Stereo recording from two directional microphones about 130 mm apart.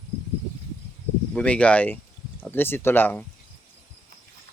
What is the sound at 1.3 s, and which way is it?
Speech, 10° left (ahead or behind).